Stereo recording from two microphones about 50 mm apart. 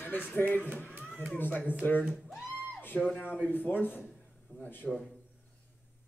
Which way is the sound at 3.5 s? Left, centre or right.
Left.